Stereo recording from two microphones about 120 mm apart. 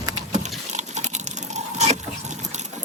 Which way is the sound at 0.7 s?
80° right.